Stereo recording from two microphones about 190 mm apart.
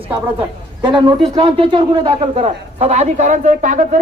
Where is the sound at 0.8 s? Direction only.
25° right (ahead or behind).